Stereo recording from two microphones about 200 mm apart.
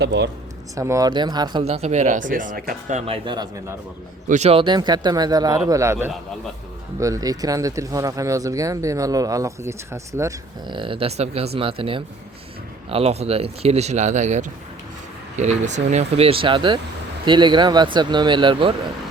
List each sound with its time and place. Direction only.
0.0 s speech: 60° right (ahead or behind)
0.8 s speech: 15° right (ahead or behind); by 3.0 s 45° right (ahead or behind)
3.1 s speech: 20° right (ahead or behind)
4.3 s speech: 30° right (ahead or behind)